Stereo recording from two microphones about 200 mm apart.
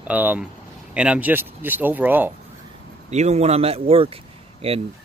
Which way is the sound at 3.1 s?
35° right (ahead or behind).